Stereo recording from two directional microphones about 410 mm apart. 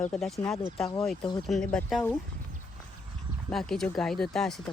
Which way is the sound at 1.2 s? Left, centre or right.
Centre.